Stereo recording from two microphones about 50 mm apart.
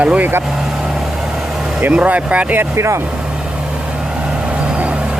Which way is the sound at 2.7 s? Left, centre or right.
Right.